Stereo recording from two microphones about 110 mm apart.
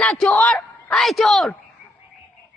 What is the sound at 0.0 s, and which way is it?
Speech, 10° left (ahead or behind).